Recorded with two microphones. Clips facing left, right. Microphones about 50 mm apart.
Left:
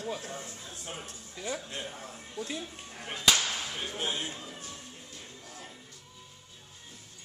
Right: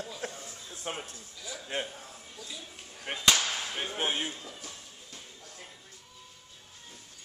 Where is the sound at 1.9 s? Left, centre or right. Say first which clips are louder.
Left 3 dB; left.